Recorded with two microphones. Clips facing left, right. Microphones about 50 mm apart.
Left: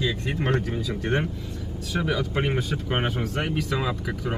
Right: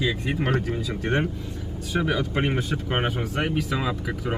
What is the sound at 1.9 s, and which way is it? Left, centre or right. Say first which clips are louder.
Speech: right 1 dB; centre.